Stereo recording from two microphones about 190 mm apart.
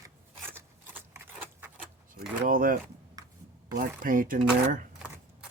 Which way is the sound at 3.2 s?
15° right (ahead or behind).